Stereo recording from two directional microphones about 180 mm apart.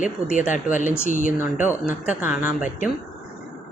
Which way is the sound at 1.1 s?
40° right (ahead or behind).